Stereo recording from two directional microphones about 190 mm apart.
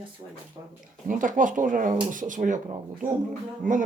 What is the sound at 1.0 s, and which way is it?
Speech, 45° right (ahead or behind).